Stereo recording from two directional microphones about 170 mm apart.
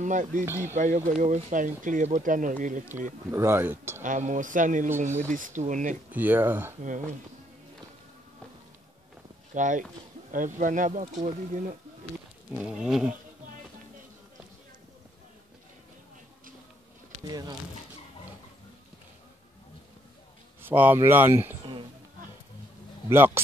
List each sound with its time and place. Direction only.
0.0 s speech: 50° right (ahead or behind)
0.5 s speech: 15° right (ahead or behind)
0.7 s speech: 45° right (ahead or behind)
3.3 s speech: 15° right (ahead or behind)
4.0 s speech: 50° right (ahead or behind)
6.1 s speech: 10° right (ahead or behind)
9.5 s speech: 50° right (ahead or behind)
12.5 s a sound: 5° right (ahead or behind)
17.3 s speech: 25° right (ahead or behind)
20.6 s speech: 10° right (ahead or behind)
23.0 s speech: 15° right (ahead or behind)